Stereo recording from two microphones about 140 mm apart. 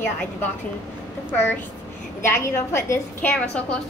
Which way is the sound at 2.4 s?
20° left (ahead or behind).